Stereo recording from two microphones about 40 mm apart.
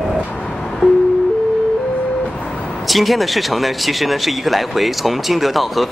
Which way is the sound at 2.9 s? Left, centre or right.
Centre.